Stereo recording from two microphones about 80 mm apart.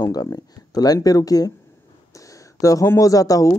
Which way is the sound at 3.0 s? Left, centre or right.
Left.